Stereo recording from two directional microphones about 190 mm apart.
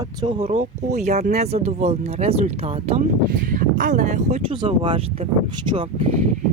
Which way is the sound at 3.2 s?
45° right (ahead or behind).